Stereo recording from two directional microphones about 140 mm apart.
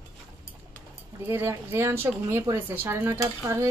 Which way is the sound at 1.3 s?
15° right (ahead or behind).